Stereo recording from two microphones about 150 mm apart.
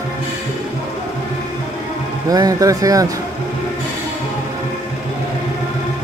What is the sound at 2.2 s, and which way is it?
Speech, 25° right (ahead or behind).